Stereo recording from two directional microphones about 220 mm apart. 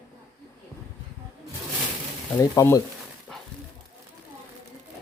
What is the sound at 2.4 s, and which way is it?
Speech, 15° left (ahead or behind).